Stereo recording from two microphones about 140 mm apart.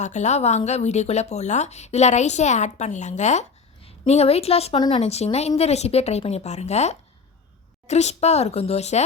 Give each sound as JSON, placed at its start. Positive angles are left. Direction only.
{"t": 0.0, "sound": "a woman's voice", "side_deg": 55}